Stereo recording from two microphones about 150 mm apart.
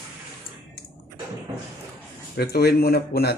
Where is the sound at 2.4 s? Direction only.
90° left.